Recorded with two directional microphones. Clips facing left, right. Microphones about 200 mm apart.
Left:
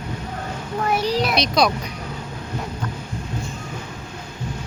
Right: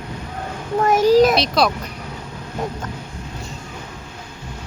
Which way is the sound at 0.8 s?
45° right (ahead or behind).